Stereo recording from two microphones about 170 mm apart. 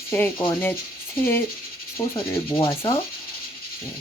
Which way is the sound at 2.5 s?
30° left (ahead or behind).